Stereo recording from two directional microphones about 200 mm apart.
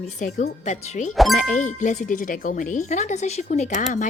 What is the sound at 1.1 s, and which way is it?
Speech, centre (ahead or behind).